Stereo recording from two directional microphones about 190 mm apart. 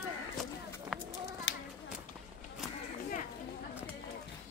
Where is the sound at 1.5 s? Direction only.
75° left (ahead or behind).